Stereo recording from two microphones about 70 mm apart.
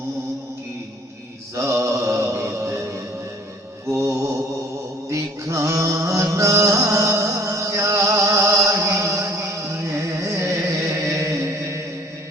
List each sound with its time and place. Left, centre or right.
1.5 s mantra: right
3.9 s mantra: right
5.1 s music: right